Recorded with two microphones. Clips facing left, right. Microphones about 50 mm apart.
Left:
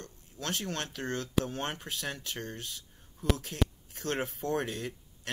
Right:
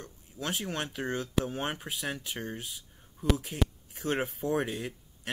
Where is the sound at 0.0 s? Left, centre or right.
Centre.